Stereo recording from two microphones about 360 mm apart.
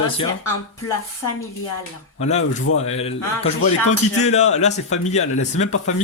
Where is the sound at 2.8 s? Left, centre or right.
Centre.